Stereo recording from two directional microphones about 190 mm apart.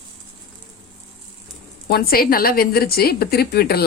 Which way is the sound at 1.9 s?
50° left (ahead or behind).